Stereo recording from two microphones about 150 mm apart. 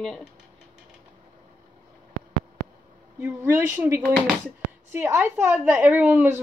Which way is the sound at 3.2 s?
10° right (ahead or behind).